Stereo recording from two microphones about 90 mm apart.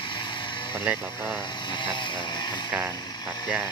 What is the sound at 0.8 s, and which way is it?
Speech, 15° right (ahead or behind).